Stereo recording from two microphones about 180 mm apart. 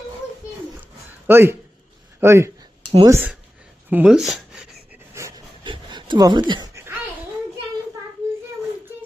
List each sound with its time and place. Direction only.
1.3 s speech: 15° right (ahead or behind)
5.2 s wood: 15° right (ahead or behind)
5.6 s a sound: 25° right (ahead or behind)